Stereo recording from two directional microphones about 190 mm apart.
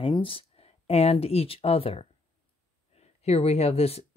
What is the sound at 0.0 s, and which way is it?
Speech, 25° left (ahead or behind).